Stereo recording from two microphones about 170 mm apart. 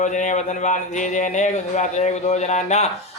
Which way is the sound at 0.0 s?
45° left (ahead or behind).